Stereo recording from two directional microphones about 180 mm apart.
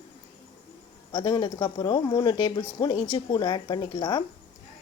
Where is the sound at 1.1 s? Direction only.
25° left (ahead or behind).